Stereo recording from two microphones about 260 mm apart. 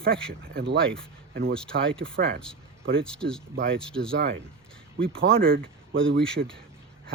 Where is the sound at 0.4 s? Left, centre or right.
Right.